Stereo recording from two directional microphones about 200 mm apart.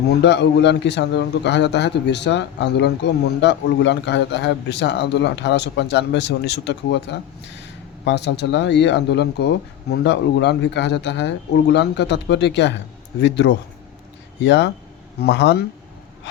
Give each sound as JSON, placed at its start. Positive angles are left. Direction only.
{"t": 0.1, "sound": "a man's voice", "side_deg": 60}